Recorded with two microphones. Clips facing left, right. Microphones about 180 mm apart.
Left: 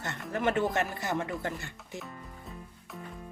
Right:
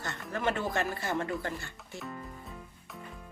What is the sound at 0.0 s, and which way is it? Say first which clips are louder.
Speech: left 2 dB; 20° left (ahead or behind).